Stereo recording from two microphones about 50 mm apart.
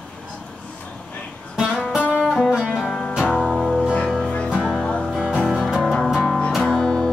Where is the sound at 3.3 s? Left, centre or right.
Centre.